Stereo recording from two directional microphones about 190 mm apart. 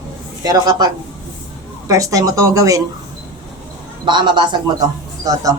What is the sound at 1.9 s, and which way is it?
Speech, 15° right (ahead or behind).